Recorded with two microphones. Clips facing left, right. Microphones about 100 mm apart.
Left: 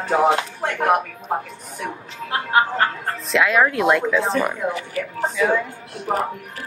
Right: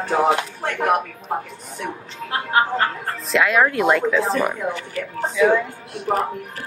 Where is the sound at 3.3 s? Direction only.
Centre (ahead or behind).